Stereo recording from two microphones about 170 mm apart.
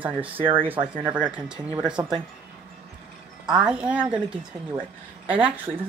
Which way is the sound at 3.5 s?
5° right (ahead or behind).